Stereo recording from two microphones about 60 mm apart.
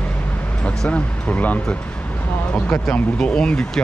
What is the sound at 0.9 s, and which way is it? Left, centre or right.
Speech, left.